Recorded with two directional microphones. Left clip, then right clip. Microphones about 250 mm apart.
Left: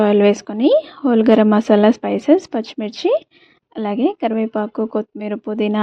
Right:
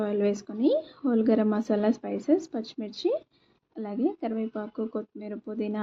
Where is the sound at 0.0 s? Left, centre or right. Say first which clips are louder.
Left 14 dB; left.